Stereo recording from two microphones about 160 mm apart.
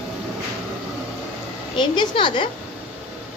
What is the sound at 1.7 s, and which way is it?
Speech, 30° left (ahead or behind).